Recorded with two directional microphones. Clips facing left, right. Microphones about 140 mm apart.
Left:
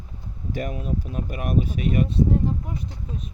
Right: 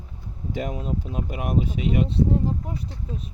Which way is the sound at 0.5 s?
20° right (ahead or behind).